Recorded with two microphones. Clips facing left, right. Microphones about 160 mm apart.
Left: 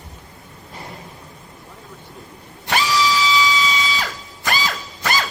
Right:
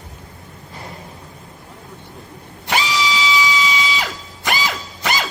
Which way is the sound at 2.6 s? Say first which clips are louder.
Left 1 dB; 20° right (ahead or behind).